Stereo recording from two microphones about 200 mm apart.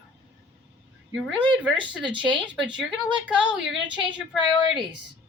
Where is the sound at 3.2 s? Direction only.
5° right (ahead or behind).